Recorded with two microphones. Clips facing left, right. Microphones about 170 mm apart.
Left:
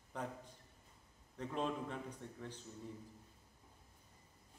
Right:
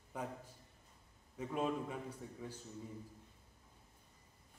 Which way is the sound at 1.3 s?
10° right (ahead or behind).